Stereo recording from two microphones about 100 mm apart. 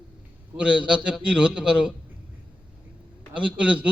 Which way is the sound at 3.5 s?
10° right (ahead or behind).